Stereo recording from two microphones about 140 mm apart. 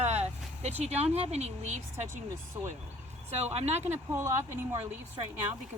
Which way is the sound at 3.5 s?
50° right (ahead or behind).